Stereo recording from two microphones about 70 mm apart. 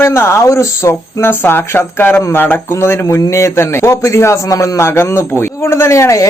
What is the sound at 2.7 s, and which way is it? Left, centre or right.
A man's voice, left.